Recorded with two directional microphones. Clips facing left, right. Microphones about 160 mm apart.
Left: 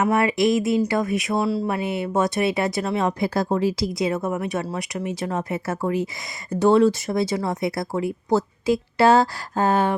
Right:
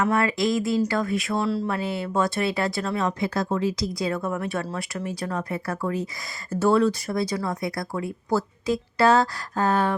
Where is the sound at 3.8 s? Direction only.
20° left (ahead or behind).